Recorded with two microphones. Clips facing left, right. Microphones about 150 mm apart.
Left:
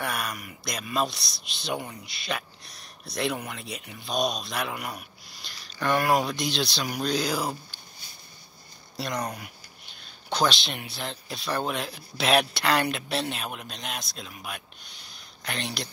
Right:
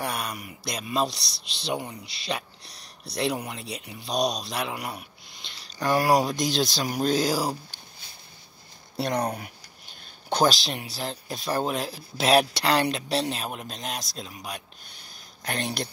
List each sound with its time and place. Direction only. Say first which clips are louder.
0.0 s speech: right 1 dB; 30° right (ahead or behind)
8.9 s speech: right 5 dB; 60° right (ahead or behind)
10.3 s speech: right 3 dB; 40° right (ahead or behind)
15.4 s speech: right 3 dB; 45° right (ahead or behind)